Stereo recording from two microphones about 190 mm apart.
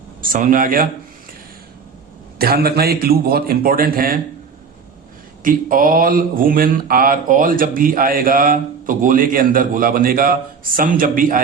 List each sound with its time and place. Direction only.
0.2 s speech: 45° right (ahead or behind)
2.4 s speech: 55° right (ahead or behind)
5.4 s speech: 45° right (ahead or behind)